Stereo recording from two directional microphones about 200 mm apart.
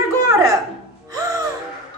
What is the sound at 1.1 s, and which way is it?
Gasp, 15° right (ahead or behind).